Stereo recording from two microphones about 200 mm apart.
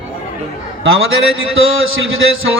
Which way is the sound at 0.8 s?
80° right.